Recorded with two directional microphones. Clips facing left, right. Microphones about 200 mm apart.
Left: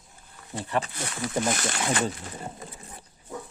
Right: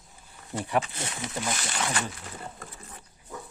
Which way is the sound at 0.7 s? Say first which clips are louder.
Right 1 dB; 15° right (ahead or behind).